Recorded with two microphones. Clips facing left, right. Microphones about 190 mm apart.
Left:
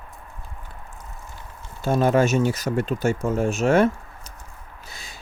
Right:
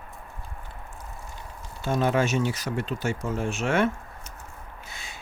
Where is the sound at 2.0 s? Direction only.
45° left (ahead or behind).